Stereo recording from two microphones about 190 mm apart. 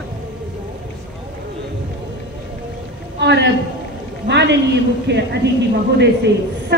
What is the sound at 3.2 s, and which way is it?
A woman's voice, 65° right (ahead or behind).